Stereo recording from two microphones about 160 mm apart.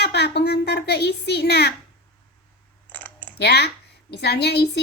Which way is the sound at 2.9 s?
10° left (ahead or behind).